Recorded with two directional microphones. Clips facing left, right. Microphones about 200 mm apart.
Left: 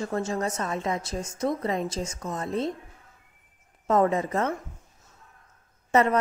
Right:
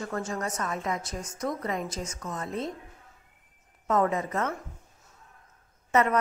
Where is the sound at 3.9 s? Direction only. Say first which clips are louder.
Left 3 dB; 30° left (ahead or behind).